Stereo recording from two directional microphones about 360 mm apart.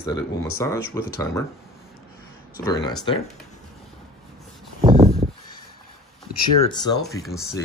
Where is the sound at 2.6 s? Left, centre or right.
Centre.